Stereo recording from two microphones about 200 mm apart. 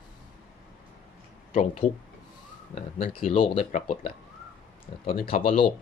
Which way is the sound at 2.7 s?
35° left (ahead or behind).